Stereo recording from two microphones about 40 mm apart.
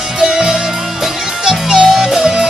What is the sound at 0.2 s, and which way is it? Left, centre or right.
Music, centre.